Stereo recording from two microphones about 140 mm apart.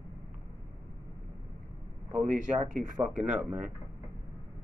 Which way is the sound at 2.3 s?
65° right (ahead or behind).